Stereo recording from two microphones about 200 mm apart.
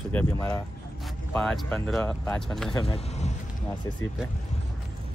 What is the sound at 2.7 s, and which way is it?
Speech, 30° left (ahead or behind).